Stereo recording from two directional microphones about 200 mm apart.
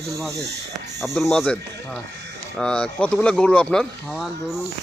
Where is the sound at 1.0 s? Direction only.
Centre (ahead or behind).